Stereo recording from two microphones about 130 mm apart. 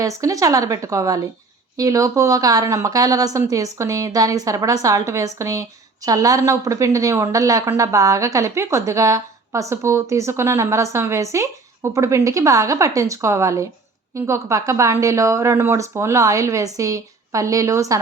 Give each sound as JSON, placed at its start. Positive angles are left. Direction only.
{"t": 0.0, "sound": "a woman's voice", "side_deg": -25}